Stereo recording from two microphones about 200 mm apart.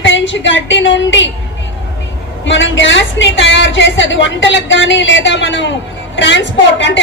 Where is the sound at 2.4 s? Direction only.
65° left (ahead or behind).